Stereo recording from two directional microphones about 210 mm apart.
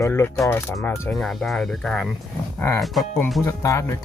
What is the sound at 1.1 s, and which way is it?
Speech, centre (ahead or behind).